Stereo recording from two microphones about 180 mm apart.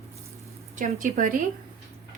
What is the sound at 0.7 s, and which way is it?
Speech, 45° right (ahead or behind).